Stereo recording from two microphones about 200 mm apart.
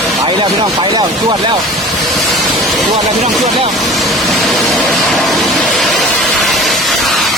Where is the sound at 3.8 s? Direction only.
Centre (ahead or behind).